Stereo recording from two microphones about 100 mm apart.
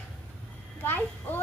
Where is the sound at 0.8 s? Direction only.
20° left (ahead or behind).